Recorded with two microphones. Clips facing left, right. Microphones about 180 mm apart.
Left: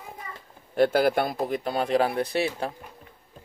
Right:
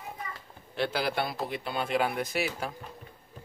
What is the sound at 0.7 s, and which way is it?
Speech, 50° left (ahead or behind).